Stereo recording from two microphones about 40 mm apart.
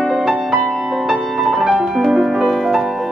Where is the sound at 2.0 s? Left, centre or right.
Centre.